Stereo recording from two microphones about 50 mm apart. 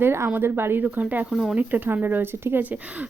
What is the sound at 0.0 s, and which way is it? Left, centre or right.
Speech, right.